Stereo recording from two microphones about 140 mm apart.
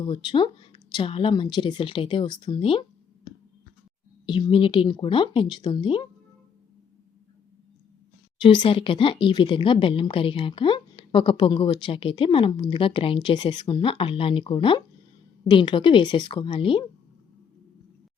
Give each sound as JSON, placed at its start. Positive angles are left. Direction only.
{"t": 0.0, "sound": "speech", "side_deg": 35}
{"t": 4.3, "sound": "speech", "side_deg": 35}
{"t": 8.4, "sound": "speech", "side_deg": 40}